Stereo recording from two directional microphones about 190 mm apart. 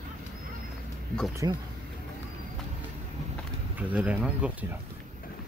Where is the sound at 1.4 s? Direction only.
20° right (ahead or behind).